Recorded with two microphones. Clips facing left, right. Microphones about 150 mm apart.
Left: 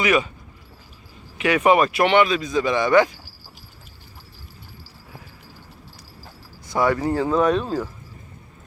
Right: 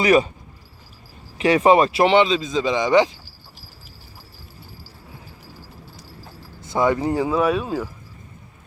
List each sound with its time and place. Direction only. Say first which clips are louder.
0.0 s speech: right 4 dB; 35° right (ahead or behind)
1.4 s speech: right 2 dB; 30° right (ahead or behind)
6.6 s speech: right 1 dB; 20° right (ahead or behind)